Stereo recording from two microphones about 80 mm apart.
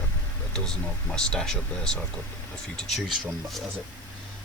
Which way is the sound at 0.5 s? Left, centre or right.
Centre.